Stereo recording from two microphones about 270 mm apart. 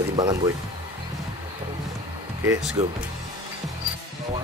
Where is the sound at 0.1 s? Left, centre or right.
Centre.